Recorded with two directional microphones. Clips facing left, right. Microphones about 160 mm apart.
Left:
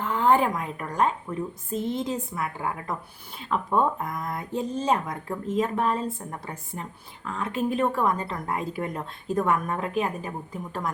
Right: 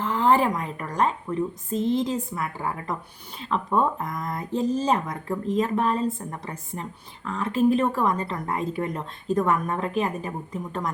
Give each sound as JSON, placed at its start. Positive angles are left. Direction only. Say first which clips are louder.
{"t": 0.0, "sound": "speech", "louder": "right 1 dB", "side_deg": 0}